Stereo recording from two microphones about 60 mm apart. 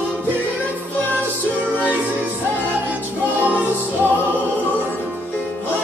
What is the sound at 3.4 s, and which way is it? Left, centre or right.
Music, right.